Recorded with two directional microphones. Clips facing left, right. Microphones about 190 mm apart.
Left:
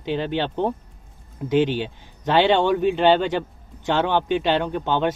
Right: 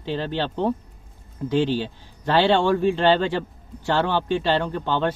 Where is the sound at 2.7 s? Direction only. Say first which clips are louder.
Left 1 dB; 5° left (ahead or behind).